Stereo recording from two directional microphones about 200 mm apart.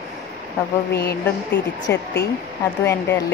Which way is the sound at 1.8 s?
55° left (ahead or behind).